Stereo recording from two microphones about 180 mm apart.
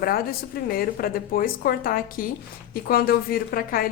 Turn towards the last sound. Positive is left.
turn(degrees=55)  # may be behind; listen again after turning